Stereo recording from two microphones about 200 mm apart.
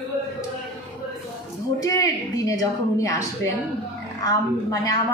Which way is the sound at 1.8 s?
15° left (ahead or behind).